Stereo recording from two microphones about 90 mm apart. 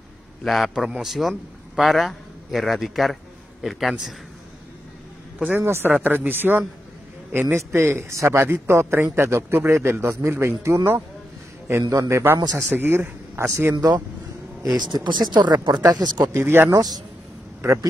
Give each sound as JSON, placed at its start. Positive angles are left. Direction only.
{"t": 0.4, "sound": "a man's voice", "side_deg": 0}
{"t": 5.6, "sound": "a man's voice", "side_deg": -30}
{"t": 12.7, "sound": "a man's voice", "side_deg": -20}
{"t": 13.7, "sound": "speech", "side_deg": -50}
{"t": 16.3, "sound": "a man's voice", "side_deg": -25}
{"t": 16.7, "sound": "speech", "side_deg": -45}